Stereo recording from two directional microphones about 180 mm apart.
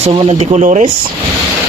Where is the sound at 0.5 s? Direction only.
40° right (ahead or behind).